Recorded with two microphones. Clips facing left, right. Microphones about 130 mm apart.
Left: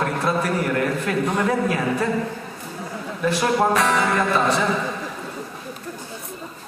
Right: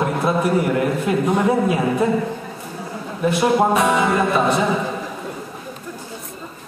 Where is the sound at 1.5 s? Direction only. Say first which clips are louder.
Right 3 dB; 15° right (ahead or behind).